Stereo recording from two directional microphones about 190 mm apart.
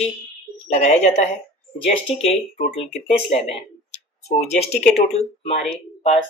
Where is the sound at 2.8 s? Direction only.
30° left (ahead or behind).